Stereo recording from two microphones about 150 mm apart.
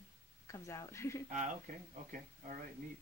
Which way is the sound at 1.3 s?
60° right (ahead or behind).